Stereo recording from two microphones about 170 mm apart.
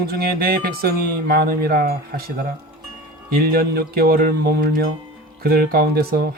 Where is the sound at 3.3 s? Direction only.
65° right (ahead or behind).